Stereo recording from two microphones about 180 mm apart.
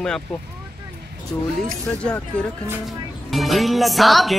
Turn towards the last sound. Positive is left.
turn(degrees=0)  # may be behind; listen again after turning